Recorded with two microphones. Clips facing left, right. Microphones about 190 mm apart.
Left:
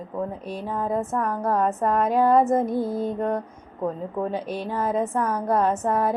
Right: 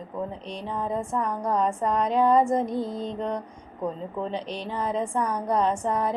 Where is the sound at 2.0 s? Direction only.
5° left (ahead or behind).